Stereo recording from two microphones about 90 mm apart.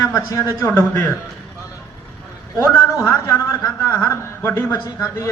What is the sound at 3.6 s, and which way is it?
A man's voice, 20° left (ahead or behind).